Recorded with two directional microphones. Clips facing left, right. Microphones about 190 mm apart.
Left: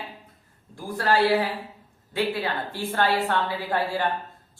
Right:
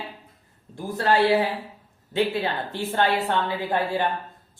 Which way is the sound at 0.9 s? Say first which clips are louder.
Right 1 dB; 20° right (ahead or behind).